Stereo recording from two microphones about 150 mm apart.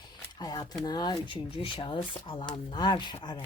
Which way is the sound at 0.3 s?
25° left (ahead or behind).